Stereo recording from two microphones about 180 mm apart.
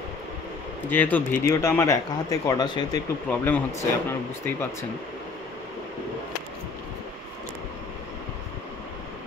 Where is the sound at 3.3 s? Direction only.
10° left (ahead or behind).